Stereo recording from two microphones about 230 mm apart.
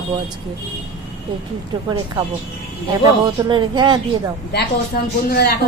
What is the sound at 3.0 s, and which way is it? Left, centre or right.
Speech, centre.